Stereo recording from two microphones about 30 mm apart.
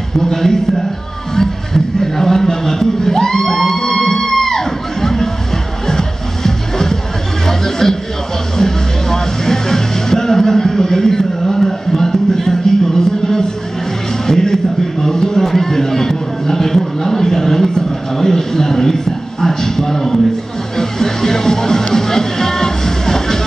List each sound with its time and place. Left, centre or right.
0.2 s a man's voice: centre
1.3 s music: centre
7.4 s a sound: centre
8.5 s music: centre
14.2 s a sound: centre
19.4 s a man's voice: centre
20.7 s music: centre